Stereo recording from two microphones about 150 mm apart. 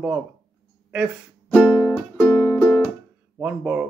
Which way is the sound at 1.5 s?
Centre (ahead or behind).